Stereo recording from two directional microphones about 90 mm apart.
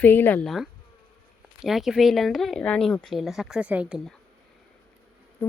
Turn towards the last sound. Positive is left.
turn(degrees=20)  # may be behind; listen again after turning